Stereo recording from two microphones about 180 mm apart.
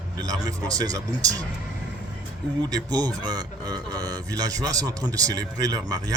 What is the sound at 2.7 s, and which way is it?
A man's voice, 20° right (ahead or behind).